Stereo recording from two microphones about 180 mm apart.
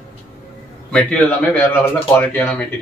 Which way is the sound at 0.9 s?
5° left (ahead or behind).